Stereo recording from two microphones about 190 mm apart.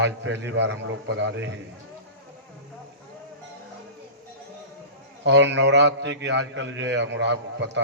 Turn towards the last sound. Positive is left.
turn(degrees=-65)  # may be behind; listen again after turning